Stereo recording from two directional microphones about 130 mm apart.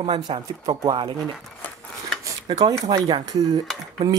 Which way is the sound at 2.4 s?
35° right (ahead or behind).